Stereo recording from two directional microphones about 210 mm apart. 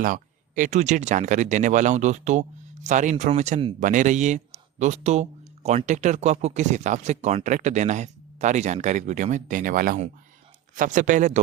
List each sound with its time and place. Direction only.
0.0 s speech: 40° right (ahead or behind)